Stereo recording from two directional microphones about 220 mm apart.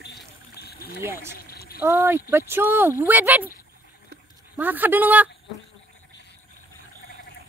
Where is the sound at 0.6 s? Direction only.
45° left (ahead or behind).